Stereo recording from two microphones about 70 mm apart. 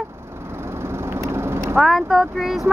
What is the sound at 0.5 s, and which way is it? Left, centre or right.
Vehicle, right.